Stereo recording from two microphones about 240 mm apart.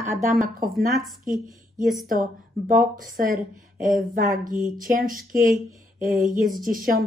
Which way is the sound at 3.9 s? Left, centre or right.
Right.